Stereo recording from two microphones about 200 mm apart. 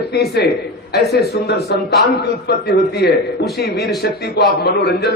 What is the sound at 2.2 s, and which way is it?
A man's voice, 55° left (ahead or behind).